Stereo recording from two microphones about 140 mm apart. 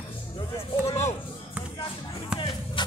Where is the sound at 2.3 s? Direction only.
35° left (ahead or behind).